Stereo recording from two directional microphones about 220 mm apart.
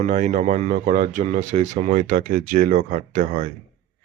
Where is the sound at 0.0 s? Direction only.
35° right (ahead or behind).